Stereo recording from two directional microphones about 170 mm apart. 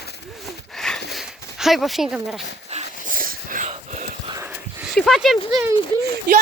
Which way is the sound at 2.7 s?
40° right (ahead or behind).